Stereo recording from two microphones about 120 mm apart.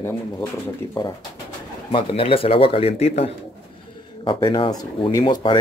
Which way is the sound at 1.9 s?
50° left (ahead or behind).